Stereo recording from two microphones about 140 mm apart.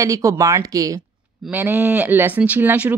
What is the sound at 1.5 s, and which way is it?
Speech, 15° right (ahead or behind).